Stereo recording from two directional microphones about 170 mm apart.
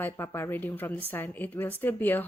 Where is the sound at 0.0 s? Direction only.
15° left (ahead or behind).